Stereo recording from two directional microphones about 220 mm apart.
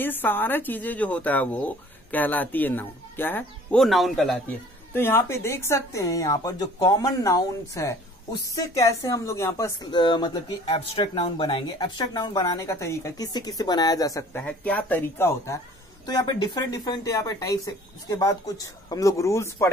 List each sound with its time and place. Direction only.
0.0 s speech: 10° left (ahead or behind)